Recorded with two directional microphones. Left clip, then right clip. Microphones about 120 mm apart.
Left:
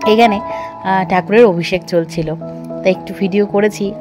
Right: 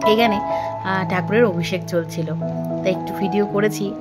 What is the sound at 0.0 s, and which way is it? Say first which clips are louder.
Speech: left 5 dB; 35° left (ahead or behind).